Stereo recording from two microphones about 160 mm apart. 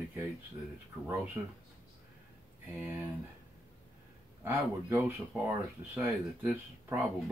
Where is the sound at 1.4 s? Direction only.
20° right (ahead or behind).